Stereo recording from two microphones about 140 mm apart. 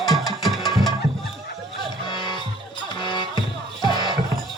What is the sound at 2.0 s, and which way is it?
Music, 35° left (ahead or behind).